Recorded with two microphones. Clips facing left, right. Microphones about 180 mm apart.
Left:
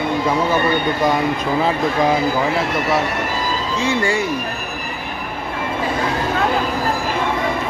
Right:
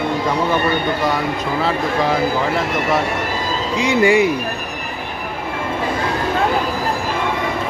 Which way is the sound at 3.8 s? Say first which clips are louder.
Right 6 dB; 15° right (ahead or behind).